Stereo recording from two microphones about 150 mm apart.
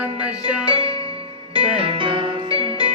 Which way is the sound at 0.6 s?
35° right (ahead or behind).